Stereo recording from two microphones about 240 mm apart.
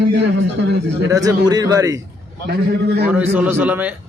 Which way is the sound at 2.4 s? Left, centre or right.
Right.